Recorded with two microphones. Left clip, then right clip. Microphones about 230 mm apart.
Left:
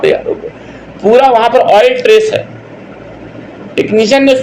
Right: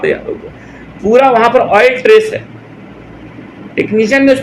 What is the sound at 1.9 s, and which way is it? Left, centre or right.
Speech, centre.